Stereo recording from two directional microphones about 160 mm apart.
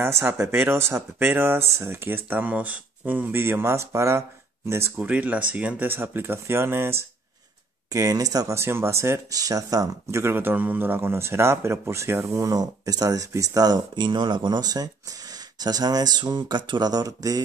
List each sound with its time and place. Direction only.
0.0 s speech: 15° right (ahead or behind)